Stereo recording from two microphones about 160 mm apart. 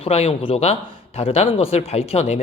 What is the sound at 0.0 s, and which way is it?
Speech, 35° left (ahead or behind).